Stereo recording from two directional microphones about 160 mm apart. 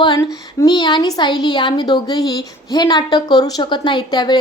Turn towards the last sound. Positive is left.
turn(degrees=25)  # may be behind; listen again after turning